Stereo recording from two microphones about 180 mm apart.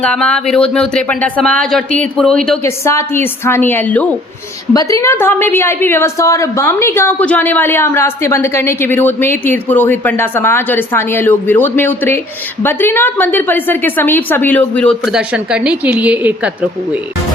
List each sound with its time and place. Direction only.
0.0 s speech: 5° left (ahead or behind)
2.6 s a woman's voice: 15° left (ahead or behind)
4.7 s a woman's voice: 20° left (ahead or behind); by 16.5 s 10° right (ahead or behind)